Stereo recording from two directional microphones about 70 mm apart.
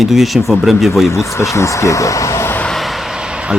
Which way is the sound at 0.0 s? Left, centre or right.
Centre.